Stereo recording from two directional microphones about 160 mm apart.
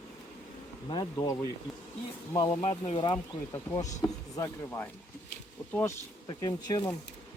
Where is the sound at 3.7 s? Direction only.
50° left (ahead or behind).